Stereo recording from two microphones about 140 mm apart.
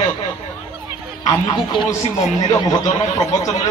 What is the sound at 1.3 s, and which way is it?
Speech, 35° left (ahead or behind).